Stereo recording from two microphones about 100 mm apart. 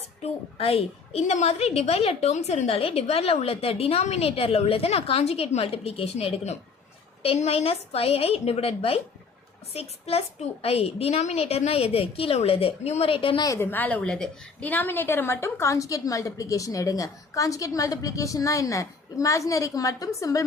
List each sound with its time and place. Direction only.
0.2 s a woman's voice: 90° left
7.2 s a woman's voice: 75° left (ahead or behind)
9.7 s a woman's voice: 90° left; by 13.4 s 65° left (ahead or behind)
13.6 s a woman's voice: 20° left (ahead or behind)